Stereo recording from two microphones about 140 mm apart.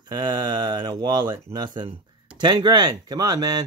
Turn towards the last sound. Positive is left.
turn(degrees=-25)  # may be behind; listen again after turning